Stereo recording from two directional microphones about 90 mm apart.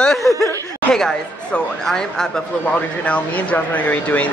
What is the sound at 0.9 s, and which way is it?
Speech, 5° left (ahead or behind).